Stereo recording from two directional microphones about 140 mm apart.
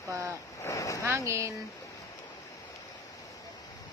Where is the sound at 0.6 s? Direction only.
20° left (ahead or behind).